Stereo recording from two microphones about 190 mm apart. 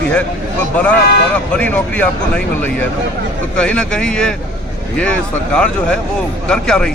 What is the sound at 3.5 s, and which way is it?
Speech, 5° left (ahead or behind).